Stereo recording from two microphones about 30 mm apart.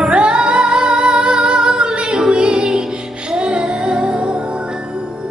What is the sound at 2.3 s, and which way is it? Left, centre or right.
Music, right.